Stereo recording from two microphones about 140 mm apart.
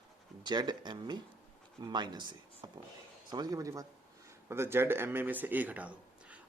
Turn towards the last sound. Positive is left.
turn(degrees=-10)  # may be behind; listen again after turning